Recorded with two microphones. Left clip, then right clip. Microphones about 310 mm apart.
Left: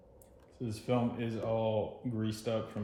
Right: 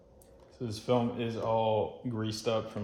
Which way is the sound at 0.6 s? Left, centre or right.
Centre.